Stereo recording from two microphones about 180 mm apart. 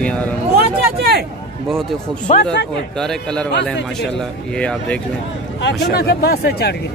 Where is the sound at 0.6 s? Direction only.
60° right (ahead or behind).